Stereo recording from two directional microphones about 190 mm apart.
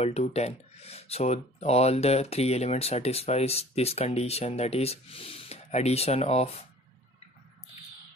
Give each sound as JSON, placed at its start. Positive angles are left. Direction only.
{"t": 0.0, "sound": "speech", "side_deg": 35}